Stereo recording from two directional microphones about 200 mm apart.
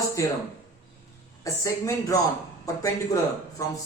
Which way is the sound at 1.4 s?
15° left (ahead or behind).